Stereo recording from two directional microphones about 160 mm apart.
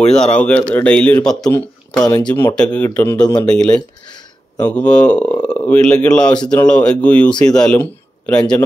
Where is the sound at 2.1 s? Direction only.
25° left (ahead or behind).